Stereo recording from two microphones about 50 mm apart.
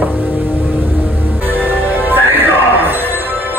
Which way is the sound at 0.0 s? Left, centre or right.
Right.